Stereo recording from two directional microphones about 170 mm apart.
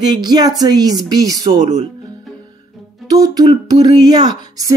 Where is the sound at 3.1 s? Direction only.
20° right (ahead or behind).